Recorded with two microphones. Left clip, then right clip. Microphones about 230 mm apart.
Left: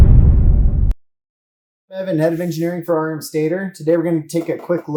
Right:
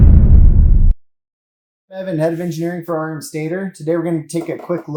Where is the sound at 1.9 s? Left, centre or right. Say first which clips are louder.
Left 1 dB; left.